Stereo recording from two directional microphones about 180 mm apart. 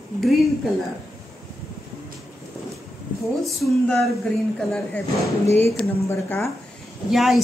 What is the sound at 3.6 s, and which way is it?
Speech, centre (ahead or behind).